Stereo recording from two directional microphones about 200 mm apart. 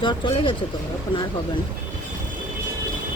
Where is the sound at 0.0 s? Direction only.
25° left (ahead or behind).